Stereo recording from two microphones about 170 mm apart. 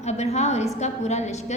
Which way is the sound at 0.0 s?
40° left (ahead or behind).